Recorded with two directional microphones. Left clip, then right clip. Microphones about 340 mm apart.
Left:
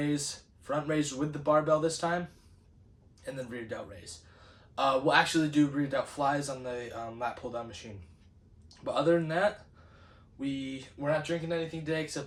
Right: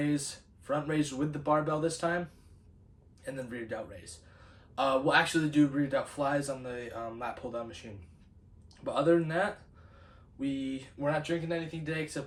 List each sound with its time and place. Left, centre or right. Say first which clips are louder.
0.0 s speech: even; centre
3.2 s speech: even; centre